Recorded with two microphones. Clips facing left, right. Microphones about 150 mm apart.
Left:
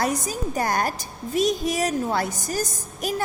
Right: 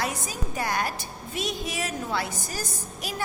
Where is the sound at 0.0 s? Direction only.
40° left (ahead or behind).